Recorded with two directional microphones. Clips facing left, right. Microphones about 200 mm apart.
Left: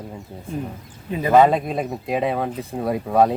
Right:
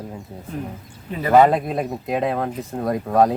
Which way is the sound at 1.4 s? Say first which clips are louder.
Even; centre (ahead or behind).